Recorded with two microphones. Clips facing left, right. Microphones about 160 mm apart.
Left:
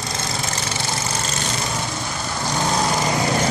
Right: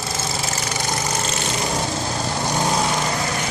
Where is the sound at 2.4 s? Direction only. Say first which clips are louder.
Even; 15° right (ahead or behind).